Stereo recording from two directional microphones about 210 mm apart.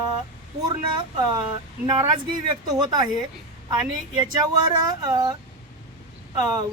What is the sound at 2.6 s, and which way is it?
Speech, 20° right (ahead or behind).